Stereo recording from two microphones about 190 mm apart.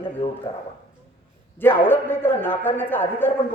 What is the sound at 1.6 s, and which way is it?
A man's voice, 10° left (ahead or behind).